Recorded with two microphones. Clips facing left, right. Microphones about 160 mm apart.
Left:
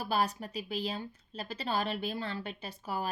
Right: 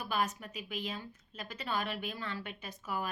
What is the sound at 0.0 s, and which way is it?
A woman's voice, 35° left (ahead or behind).